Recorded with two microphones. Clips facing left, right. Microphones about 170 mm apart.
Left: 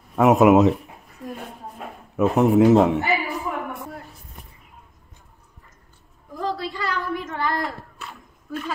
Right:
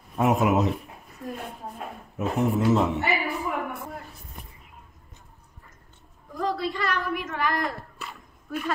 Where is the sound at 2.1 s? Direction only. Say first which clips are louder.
Left 8 dB; 75° left (ahead or behind).